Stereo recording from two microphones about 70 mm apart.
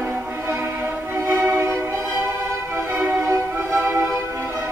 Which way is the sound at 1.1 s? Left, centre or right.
Right.